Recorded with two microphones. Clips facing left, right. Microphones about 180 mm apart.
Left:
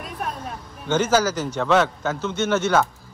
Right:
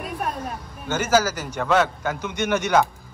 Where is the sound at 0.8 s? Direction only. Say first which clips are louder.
Left 1 dB; 10° right (ahead or behind).